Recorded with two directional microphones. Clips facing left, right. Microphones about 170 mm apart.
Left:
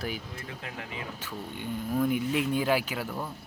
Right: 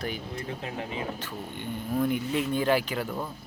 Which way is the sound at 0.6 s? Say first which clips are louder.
Right 4 dB; 30° right (ahead or behind).